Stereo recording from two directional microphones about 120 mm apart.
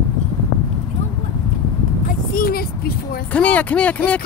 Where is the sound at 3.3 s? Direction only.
10° left (ahead or behind).